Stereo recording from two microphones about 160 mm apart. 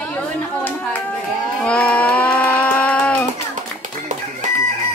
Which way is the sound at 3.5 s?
50° right (ahead or behind).